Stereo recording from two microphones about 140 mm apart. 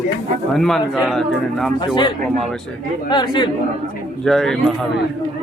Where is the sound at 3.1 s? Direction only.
30° left (ahead or behind).